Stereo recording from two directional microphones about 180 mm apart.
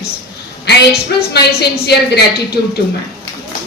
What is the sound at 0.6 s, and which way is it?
Speech, 65° left (ahead or behind).